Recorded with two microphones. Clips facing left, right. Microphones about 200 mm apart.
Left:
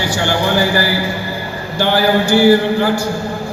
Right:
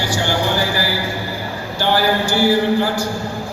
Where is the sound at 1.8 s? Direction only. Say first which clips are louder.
Left 4 dB; 55° left (ahead or behind).